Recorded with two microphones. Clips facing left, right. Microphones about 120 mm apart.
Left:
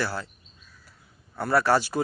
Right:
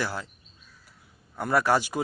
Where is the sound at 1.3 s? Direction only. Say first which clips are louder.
Left 1 dB; 15° right (ahead or behind).